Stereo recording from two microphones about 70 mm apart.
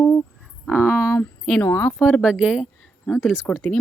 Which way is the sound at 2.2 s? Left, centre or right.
Centre.